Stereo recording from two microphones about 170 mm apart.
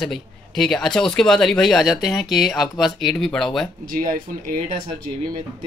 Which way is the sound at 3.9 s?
55° right (ahead or behind).